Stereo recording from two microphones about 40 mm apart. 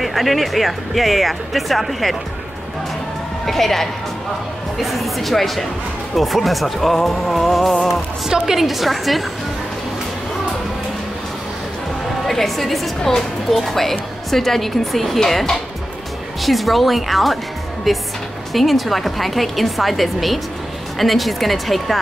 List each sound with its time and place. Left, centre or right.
0.0 s speech: centre
3.4 s speech: centre
12.3 s speech: centre